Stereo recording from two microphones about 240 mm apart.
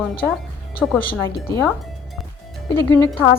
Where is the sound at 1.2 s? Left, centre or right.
Centre.